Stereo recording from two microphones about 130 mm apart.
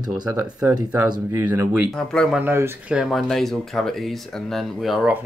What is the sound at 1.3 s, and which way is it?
Speech, 15° right (ahead or behind).